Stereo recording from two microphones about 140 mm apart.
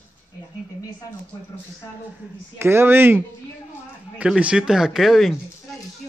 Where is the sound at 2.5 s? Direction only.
15° right (ahead or behind).